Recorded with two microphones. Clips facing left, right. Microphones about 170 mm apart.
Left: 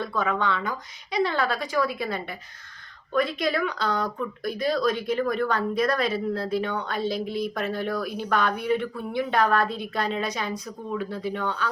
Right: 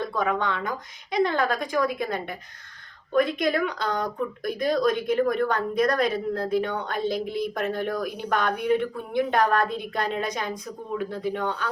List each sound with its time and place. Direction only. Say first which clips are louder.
0.0 s speech: even; 15° right (ahead or behind)
1.1 s a woman's voice: right 2 dB; 50° right (ahead or behind)
11.3 s speech: right 2 dB; 15° right (ahead or behind)